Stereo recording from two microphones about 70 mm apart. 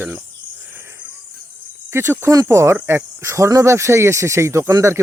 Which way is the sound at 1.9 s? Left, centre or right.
Right.